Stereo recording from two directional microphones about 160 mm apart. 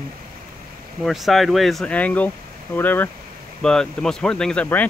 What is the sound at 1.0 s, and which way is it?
Speech, centre (ahead or behind).